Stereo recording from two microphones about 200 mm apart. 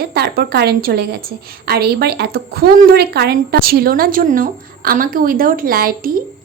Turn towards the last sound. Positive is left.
turn(degrees=-45)  # may be behind; listen again after turning